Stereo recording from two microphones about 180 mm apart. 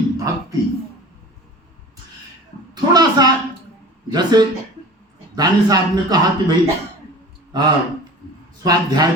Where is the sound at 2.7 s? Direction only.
20° right (ahead or behind).